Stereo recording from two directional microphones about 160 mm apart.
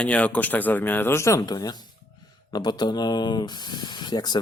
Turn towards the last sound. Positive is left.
turn(degrees=25)  # may be behind; listen again after turning